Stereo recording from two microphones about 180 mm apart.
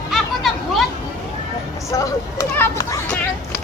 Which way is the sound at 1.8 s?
15° left (ahead or behind).